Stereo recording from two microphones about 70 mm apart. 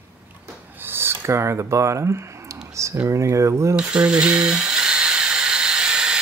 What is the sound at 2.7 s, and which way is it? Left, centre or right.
Speech, right.